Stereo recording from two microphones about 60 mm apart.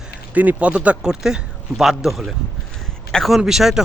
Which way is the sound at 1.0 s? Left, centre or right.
Centre.